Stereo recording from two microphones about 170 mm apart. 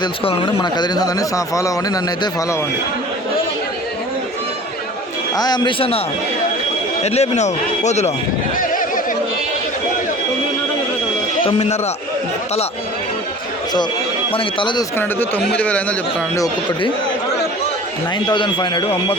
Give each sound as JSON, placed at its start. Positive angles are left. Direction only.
{"t": 0.0, "sound": "speech", "side_deg": 30}
{"t": 5.4, "sound": "speech", "side_deg": 25}
{"t": 7.0, "sound": "speech", "side_deg": 40}
{"t": 11.4, "sound": "speech", "side_deg": 40}
{"t": 14.3, "sound": "speech", "side_deg": 30}
{"t": 14.9, "sound": "speech", "side_deg": 10}
{"t": 18.3, "sound": "speech", "side_deg": 25}